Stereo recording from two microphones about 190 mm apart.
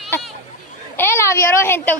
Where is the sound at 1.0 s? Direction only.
15° left (ahead or behind).